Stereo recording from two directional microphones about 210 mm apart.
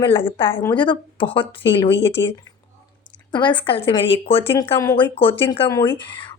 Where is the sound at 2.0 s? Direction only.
55° left (ahead or behind).